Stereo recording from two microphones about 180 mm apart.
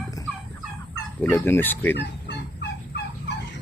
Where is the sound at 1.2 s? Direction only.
10° left (ahead or behind).